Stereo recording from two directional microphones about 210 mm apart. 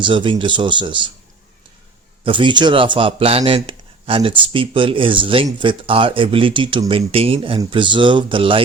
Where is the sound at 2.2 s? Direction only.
25° right (ahead or behind).